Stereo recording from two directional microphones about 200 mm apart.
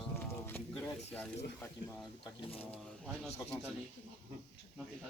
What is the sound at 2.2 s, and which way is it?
Speech, 30° left (ahead or behind).